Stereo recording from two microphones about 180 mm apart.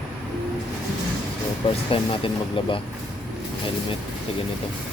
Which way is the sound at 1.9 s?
30° left (ahead or behind).